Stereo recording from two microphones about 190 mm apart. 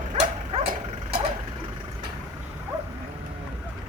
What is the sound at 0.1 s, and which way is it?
Dog, 35° right (ahead or behind).